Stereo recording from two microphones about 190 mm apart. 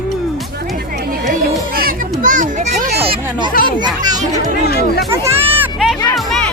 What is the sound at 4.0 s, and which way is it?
Speech, 20° right (ahead or behind).